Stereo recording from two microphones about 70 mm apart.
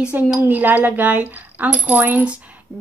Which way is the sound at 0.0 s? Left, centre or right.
Centre.